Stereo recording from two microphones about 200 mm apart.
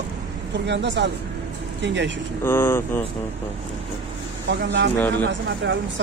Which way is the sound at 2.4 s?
10° left (ahead or behind).